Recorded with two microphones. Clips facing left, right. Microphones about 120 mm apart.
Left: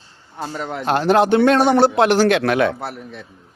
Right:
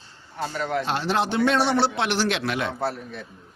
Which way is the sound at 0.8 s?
50° left (ahead or behind).